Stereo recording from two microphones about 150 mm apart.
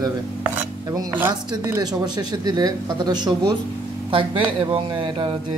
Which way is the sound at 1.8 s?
25° right (ahead or behind).